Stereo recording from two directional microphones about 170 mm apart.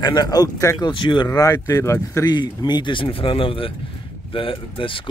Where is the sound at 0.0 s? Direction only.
25° left (ahead or behind).